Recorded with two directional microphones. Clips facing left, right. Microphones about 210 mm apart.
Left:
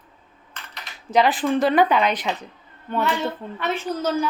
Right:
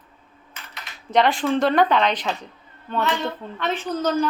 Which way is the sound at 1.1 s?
5° left (ahead or behind).